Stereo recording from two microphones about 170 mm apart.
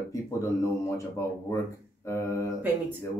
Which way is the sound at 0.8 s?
20° left (ahead or behind).